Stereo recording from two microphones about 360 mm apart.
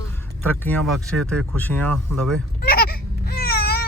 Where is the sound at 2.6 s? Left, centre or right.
Left.